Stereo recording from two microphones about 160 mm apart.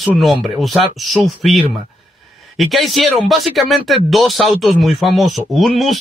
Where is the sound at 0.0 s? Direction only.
Centre (ahead or behind).